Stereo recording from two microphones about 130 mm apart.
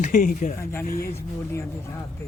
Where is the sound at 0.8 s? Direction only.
90° left.